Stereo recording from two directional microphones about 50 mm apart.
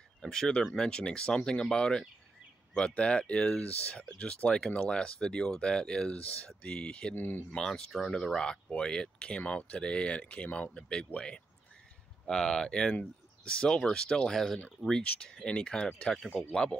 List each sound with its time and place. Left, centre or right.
0.2 s speech: centre
7.2 s speech: left
7.5 s speech: centre
9.4 s speech: left